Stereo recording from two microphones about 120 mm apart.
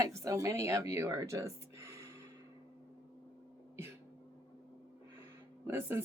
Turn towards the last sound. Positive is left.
turn(degrees=-20)  # may be behind; listen again after turning